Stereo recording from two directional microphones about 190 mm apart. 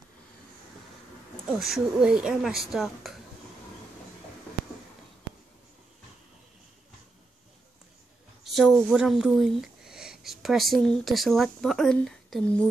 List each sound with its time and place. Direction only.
1.6 s speech: centre (ahead or behind)
8.5 s speech: centre (ahead or behind)